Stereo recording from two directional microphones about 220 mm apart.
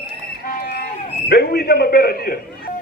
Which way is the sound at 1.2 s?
45° left (ahead or behind).